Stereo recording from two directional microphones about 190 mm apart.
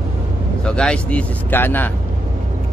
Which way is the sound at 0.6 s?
5° left (ahead or behind).